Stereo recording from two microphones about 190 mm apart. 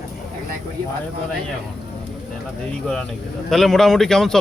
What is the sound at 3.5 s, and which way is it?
Speech, centre (ahead or behind).